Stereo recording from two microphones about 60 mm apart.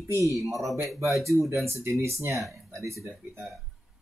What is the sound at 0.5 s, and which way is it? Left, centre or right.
Speech, centre.